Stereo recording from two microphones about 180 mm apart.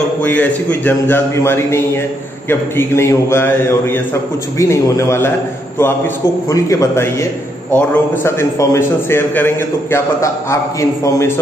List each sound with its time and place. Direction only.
0.2 s a man's voice: 10° left (ahead or behind)
6.5 s a man's voice: 15° left (ahead or behind)